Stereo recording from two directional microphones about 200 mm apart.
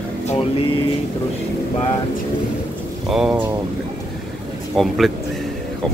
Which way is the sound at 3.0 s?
5° right (ahead or behind).